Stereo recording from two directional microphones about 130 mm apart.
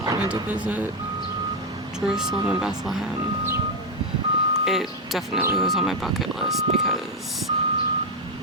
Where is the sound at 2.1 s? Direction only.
5° right (ahead or behind).